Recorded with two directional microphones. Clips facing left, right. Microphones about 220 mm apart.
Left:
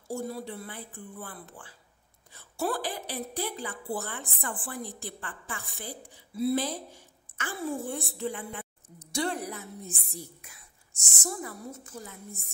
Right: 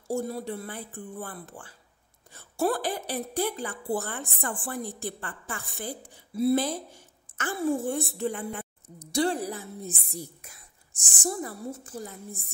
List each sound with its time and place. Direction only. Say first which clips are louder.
0.1 s a woman's voice: right 4 dB; 45° right (ahead or behind)